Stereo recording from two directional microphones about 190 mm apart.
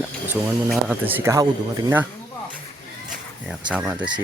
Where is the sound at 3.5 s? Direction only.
5° right (ahead or behind).